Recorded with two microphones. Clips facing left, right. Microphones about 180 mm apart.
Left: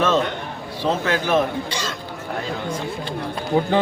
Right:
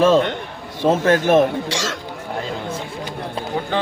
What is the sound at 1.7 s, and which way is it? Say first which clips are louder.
Speech: right 3 dB; 90° right.